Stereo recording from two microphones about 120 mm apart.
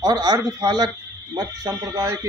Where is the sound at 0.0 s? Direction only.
30° right (ahead or behind).